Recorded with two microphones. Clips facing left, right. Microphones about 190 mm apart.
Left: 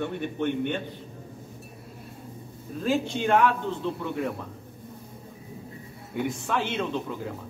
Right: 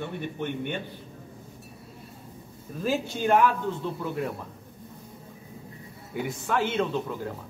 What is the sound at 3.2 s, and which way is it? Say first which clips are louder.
A man's voice: right 2 dB; 5° right (ahead or behind).